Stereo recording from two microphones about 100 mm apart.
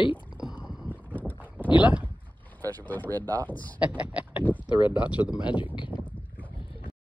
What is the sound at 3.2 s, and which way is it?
Speech, 40° right (ahead or behind).